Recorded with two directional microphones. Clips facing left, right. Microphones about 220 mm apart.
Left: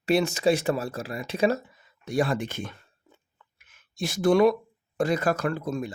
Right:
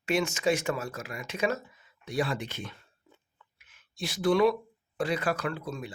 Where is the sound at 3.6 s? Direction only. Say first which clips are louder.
Left 5 dB; 45° left (ahead or behind).